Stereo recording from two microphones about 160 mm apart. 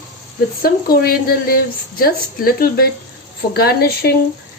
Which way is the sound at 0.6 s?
70° left (ahead or behind).